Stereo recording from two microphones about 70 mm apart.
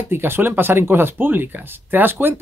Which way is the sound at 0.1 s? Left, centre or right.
Right.